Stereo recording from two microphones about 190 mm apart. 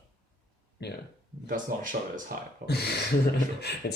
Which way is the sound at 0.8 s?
60° left (ahead or behind).